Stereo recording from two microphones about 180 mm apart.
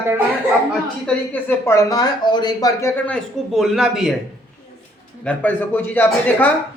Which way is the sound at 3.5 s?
Centre (ahead or behind).